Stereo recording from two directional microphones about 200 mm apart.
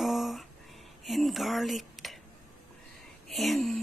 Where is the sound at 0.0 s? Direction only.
Centre (ahead or behind).